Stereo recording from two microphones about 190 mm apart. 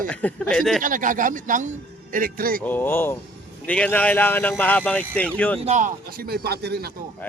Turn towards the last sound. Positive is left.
turn(degrees=-55)  # may be behind; listen again after turning